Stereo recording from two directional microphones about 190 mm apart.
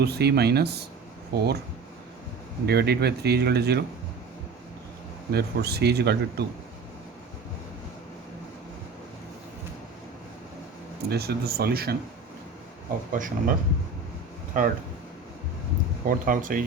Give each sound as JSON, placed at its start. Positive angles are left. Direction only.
{"t": 0.0, "sound": "speech", "side_deg": -60}
{"t": 2.6, "sound": "speech", "side_deg": -60}
{"t": 5.3, "sound": "speech", "side_deg": -60}
{"t": 11.1, "sound": "speech", "side_deg": -55}
{"t": 13.1, "sound": "speech", "side_deg": -45}
{"t": 14.5, "sound": "speech", "side_deg": -45}
{"t": 16.0, "sound": "speech", "side_deg": -45}